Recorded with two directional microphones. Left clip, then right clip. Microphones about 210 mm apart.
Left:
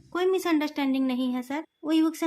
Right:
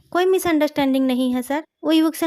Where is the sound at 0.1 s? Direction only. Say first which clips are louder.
Right 7 dB; 40° right (ahead or behind).